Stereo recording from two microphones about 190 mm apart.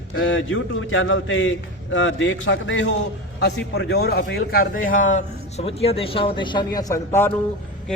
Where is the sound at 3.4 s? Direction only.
60° left (ahead or behind).